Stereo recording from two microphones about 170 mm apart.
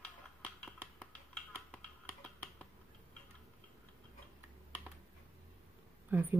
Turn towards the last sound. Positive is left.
turn(degrees=-10)  # may be behind; listen again after turning